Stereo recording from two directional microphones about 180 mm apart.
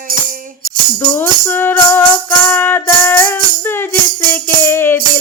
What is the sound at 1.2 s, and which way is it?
Music, 10° left (ahead or behind).